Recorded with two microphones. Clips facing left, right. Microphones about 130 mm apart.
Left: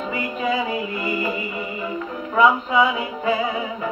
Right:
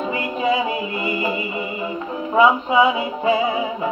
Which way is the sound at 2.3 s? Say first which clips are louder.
Right 2 dB; 25° right (ahead or behind).